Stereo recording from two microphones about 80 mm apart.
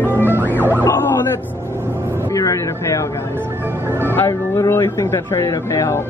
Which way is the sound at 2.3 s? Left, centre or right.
Left.